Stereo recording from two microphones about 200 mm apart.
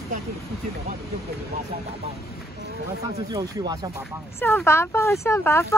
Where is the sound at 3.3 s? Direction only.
20° right (ahead or behind).